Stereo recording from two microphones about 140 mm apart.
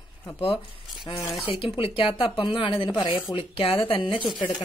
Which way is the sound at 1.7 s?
35° left (ahead or behind).